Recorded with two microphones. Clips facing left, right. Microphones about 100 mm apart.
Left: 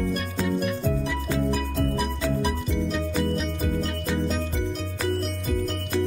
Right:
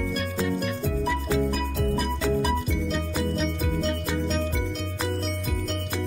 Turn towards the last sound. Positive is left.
turn(degrees=0)  # may be behind; listen again after turning